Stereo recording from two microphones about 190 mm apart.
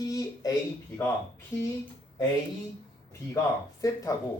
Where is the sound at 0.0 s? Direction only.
20° left (ahead or behind).